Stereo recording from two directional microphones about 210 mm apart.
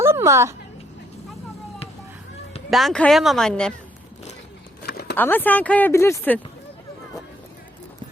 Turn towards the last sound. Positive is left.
turn(degrees=10)  # may be behind; listen again after turning